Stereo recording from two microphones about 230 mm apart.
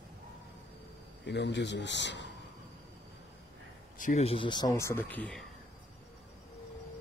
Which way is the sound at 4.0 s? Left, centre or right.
Left.